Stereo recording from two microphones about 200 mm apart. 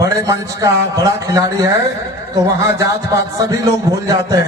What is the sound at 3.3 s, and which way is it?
Speech, 15° right (ahead or behind).